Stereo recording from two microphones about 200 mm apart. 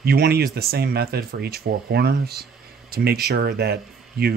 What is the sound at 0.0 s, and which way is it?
Speech, 50° right (ahead or behind).